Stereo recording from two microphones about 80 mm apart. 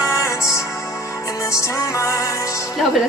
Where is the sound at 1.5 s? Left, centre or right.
Left.